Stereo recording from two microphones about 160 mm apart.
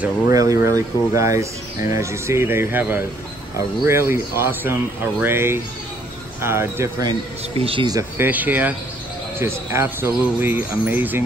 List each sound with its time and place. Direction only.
0.3 s speech: 20° right (ahead or behind)
7.1 s speech: 35° right (ahead or behind)
7.9 s speech: 10° right (ahead or behind)